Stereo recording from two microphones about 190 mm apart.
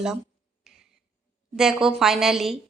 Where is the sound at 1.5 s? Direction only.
Centre (ahead or behind).